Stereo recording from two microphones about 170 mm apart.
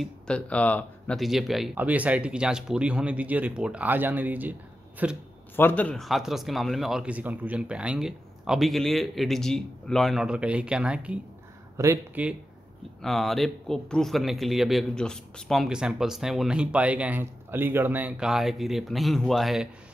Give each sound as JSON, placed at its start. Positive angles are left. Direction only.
{"t": 0.0, "sound": "speech", "side_deg": 5}
{"t": 5.6, "sound": "a man's voice", "side_deg": 10}
{"t": 11.7, "sound": "speech", "side_deg": -15}
{"t": 13.0, "sound": "a man's voice", "side_deg": 0}